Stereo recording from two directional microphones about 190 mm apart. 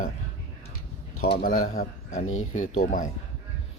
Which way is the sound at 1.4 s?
45° left (ahead or behind).